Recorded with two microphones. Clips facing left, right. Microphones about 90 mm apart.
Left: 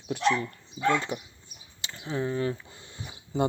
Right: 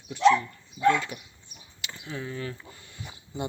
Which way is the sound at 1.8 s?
30° left (ahead or behind).